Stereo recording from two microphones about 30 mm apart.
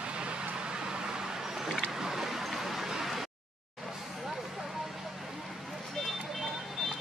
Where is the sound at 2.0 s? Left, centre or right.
Centre.